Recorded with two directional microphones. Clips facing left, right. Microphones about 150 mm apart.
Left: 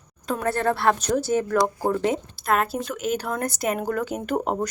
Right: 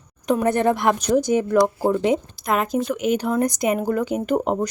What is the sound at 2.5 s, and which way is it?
Speech, centre (ahead or behind).